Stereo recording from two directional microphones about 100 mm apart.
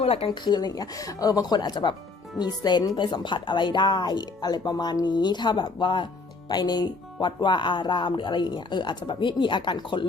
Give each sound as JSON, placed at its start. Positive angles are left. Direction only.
{"t": 0.0, "sound": "speech", "side_deg": 75}
{"t": 0.4, "sound": "speech", "side_deg": 45}